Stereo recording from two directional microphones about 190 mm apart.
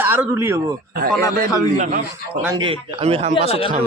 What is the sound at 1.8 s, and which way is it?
Speech, 50° right (ahead or behind).